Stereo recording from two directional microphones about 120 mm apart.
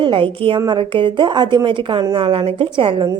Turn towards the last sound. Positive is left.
turn(degrees=-45)  # may be behind; listen again after turning